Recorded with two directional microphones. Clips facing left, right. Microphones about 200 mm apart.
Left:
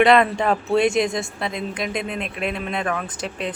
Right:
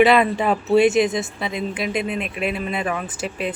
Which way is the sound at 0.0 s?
5° right (ahead or behind).